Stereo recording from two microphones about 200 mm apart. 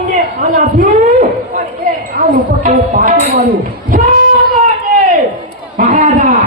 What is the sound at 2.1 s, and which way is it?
Speech, 40° right (ahead or behind).